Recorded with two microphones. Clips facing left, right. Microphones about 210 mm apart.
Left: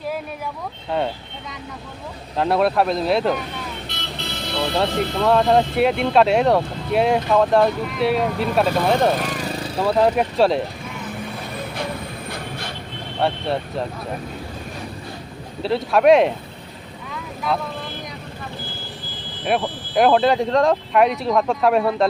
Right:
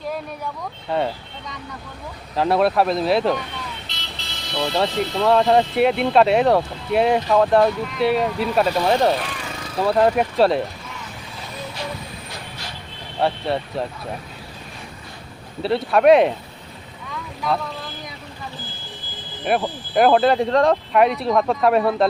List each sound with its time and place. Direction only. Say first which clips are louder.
0.9 s speech: even; centre (ahead or behind)
2.3 s speech: right 1 dB; centre (ahead or behind)
3.8 s vehicle: left 6 dB; 55° left (ahead or behind)
5.2 s speech: even; centre (ahead or behind)
9.1 s lawn mower: left 4 dB; 35° left (ahead or behind)
9.8 s speech: even; centre (ahead or behind)
12.3 s vehicle: left 5 dB; 55° left (ahead or behind)
13.1 s speech: even; centre (ahead or behind)
15.6 s speech: even; centre (ahead or behind)
17.5 s speech: even; centre (ahead or behind)
19.5 s speech: even; centre (ahead or behind)